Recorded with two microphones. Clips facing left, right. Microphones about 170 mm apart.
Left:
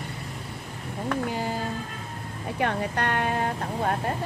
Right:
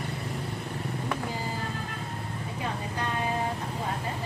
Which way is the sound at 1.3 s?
70° left (ahead or behind).